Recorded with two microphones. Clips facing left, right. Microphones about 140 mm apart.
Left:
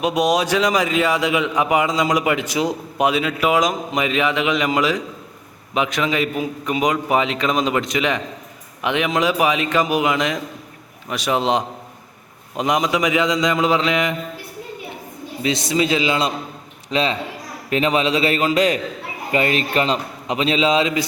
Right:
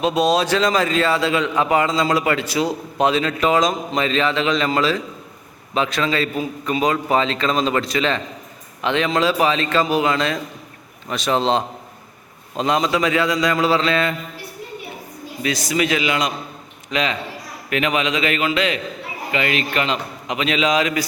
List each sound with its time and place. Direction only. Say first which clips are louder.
0.0 s a man's voice: right 1 dB; 15° left (ahead or behind)
15.4 s a man's voice: left 1 dB; 25° left (ahead or behind)